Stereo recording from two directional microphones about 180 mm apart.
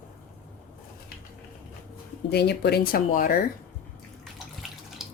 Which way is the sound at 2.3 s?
65° left (ahead or behind).